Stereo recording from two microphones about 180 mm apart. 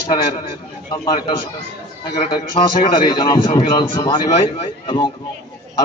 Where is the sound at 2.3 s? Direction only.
25° left (ahead or behind).